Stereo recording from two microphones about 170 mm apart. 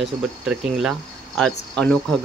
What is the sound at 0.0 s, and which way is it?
Speech, 5° right (ahead or behind).